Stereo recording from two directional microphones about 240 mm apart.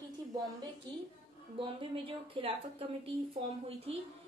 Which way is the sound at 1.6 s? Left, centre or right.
Right.